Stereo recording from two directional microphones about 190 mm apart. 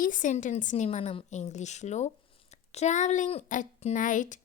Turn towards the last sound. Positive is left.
turn(degrees=40)  # may be behind; listen again after turning